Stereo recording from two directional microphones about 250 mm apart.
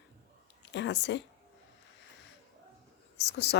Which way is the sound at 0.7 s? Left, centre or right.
Left.